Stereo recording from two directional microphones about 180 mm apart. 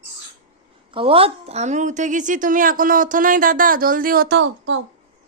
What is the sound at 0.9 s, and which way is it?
A woman's voice, 30° right (ahead or behind).